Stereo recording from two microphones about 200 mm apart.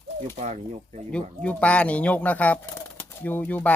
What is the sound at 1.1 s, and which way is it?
Speech, 5° left (ahead or behind).